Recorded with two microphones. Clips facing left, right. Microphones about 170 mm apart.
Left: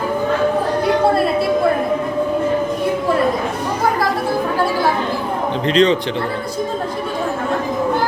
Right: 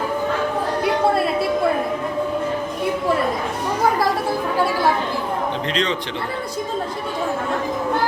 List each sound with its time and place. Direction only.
5.6 s speech: 30° left (ahead or behind)